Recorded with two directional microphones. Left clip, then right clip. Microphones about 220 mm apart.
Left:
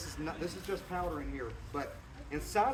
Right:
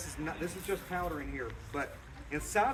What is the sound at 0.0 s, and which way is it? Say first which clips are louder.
Speech: right 1 dB; 10° right (ahead or behind).